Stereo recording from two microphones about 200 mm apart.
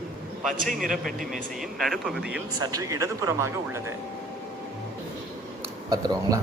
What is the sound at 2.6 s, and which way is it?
Speech, 15° right (ahead or behind).